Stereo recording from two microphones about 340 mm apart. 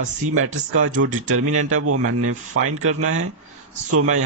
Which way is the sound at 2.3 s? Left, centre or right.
Right.